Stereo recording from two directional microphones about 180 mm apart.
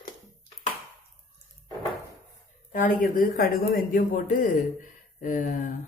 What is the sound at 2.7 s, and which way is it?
Speech, 50° left (ahead or behind).